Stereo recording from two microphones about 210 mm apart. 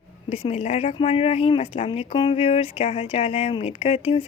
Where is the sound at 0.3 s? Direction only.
30° left (ahead or behind).